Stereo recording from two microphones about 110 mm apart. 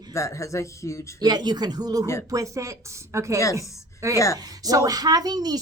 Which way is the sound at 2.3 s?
30° right (ahead or behind).